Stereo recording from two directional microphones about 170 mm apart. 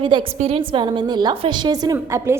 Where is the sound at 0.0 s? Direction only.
30° right (ahead or behind).